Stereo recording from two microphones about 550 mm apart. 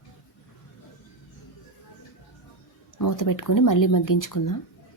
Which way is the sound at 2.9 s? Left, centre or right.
Left.